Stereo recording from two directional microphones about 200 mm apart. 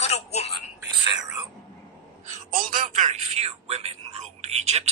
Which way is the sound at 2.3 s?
40° right (ahead or behind).